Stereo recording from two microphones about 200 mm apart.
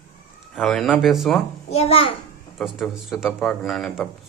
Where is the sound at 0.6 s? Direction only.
Centre (ahead or behind).